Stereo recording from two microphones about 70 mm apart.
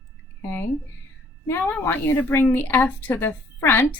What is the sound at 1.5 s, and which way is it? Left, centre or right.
A woman's voice, left.